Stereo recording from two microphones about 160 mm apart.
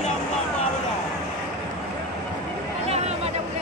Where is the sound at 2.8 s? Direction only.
40° right (ahead or behind).